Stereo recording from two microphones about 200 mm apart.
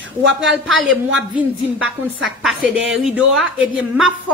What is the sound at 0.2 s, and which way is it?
Speech, 65° right (ahead or behind).